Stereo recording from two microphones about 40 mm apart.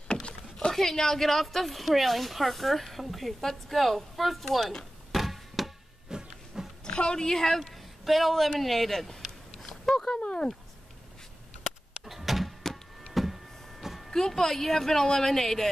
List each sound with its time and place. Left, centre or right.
0.1 s speech: left; by 4.7 s centre
5.1 s chop: centre
6.0 s a sound: centre
6.8 s a woman's voice: left
7.6 s speech: centre
9.6 s a sound: centre
10.1 s speech: left
12.0 s power windows: centre
13.1 s vehicle: centre
14.1 s speech: centre